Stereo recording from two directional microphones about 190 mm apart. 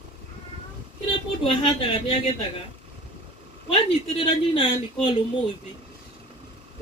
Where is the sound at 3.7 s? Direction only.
30° left (ahead or behind).